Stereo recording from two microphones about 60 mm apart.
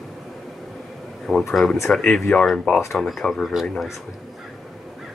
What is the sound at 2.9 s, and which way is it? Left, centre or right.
Speech, centre.